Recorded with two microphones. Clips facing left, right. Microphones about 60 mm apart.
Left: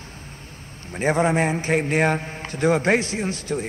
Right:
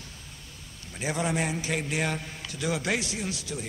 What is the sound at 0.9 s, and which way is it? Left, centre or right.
A man's voice, left.